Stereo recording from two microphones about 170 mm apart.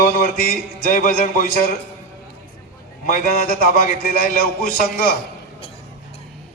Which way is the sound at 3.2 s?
65° left (ahead or behind).